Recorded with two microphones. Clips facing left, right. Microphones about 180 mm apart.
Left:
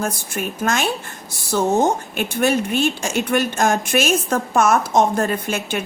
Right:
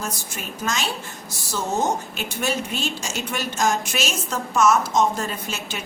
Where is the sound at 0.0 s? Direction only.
55° left (ahead or behind).